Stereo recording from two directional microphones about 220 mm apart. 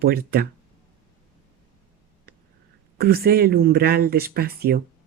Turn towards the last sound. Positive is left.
turn(degrees=-45)  # may be behind; listen again after turning